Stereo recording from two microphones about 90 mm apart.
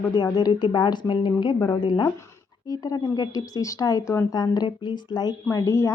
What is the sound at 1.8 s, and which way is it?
Speech, 60° left (ahead or behind).